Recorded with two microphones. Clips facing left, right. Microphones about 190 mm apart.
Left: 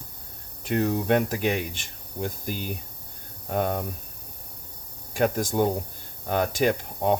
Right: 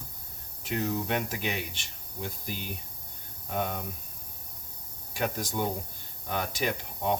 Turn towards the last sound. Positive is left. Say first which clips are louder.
# left 6 dB
turn(degrees=50)  # may be behind; listen again after turning